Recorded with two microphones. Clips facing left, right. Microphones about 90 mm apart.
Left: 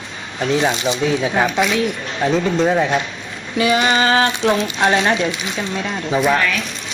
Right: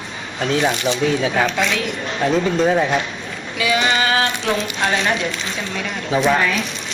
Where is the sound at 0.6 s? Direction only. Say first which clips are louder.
Right 1 dB; 20° left (ahead or behind).